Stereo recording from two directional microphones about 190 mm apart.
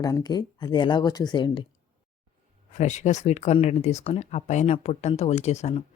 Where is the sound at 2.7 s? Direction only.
40° left (ahead or behind).